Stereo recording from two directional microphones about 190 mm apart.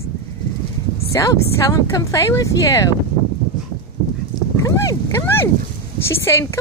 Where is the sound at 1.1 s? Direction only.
20° left (ahead or behind).